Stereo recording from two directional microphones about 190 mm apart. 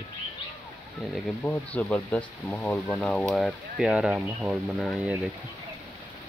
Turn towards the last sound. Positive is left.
turn(degrees=0)  # may be behind; listen again after turning